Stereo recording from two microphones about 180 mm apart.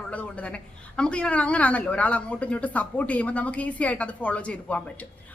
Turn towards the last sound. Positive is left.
turn(degrees=5)  # may be behind; listen again after turning